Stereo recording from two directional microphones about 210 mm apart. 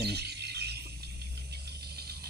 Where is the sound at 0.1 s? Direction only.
50° right (ahead or behind).